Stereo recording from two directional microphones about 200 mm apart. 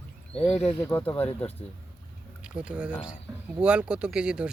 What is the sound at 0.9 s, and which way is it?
Speech, 10° left (ahead or behind).